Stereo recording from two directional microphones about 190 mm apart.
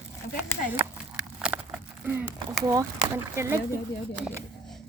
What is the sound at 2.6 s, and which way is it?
Speech, 20° right (ahead or behind).